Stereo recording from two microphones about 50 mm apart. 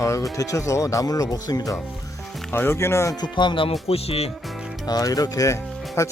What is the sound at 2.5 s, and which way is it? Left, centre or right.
Speech, left.